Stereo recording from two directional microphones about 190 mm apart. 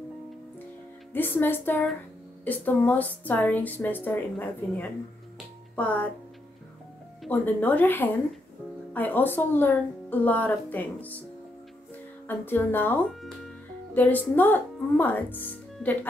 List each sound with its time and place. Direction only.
1.1 s a woman's voice: 10° left (ahead or behind)
7.2 s a woman's voice: 10° left (ahead or behind)
12.3 s a woman's voice: 10° left (ahead or behind)